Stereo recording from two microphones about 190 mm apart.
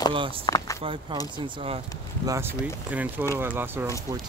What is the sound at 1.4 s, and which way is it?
Speech, 30° right (ahead or behind).